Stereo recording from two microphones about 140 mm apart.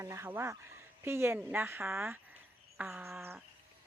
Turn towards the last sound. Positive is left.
turn(degrees=-15)  # may be behind; listen again after turning